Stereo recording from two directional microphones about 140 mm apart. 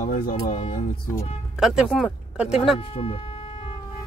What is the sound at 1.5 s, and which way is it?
Speech, 5° right (ahead or behind).